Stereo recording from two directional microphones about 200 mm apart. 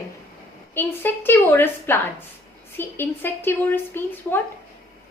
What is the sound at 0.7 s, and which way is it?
A woman's voice, 10° left (ahead or behind).